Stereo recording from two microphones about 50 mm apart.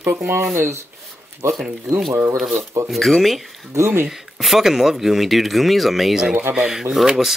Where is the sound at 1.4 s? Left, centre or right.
Right.